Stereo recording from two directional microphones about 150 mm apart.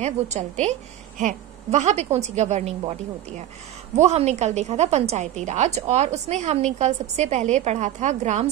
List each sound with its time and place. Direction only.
0.0 s a woman's voice: 50° right (ahead or behind)
3.9 s a woman's voice: 50° right (ahead or behind)